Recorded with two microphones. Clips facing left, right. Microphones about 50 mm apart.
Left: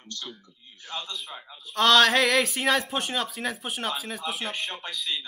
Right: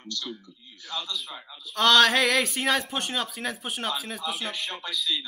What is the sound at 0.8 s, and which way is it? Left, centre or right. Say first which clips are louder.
Speech: right 1 dB; left.